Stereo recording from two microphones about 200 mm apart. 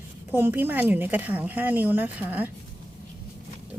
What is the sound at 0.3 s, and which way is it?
A woman's voice, 10° right (ahead or behind).